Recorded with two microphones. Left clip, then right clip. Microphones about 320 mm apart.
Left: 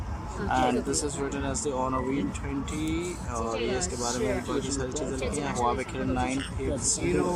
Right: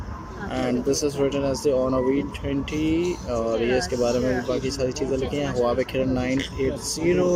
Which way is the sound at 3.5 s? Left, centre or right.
Centre.